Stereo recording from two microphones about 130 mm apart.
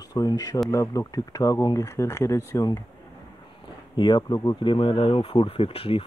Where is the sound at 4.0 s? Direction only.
35° left (ahead or behind).